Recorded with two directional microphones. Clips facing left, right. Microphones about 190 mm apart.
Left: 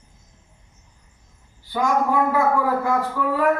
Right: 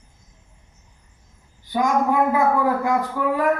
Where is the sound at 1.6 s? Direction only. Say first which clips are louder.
Right 1 dB; 20° right (ahead or behind).